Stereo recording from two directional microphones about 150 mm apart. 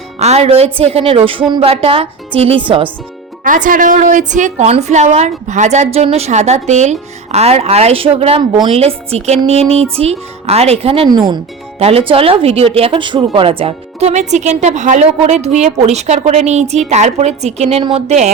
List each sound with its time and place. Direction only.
0.2 s a woman's voice: 45° right (ahead or behind)
3.4 s a woman's voice: 65° right (ahead or behind); by 11.1 s 40° right (ahead or behind)
11.1 s speech: 30° right (ahead or behind)
11.8 s a woman's voice: 40° right (ahead or behind)